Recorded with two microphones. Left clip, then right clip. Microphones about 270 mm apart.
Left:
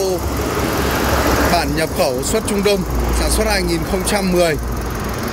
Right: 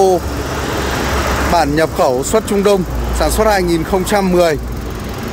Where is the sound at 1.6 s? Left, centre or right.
Centre.